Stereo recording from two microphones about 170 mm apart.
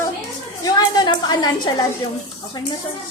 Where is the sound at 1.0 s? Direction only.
25° left (ahead or behind).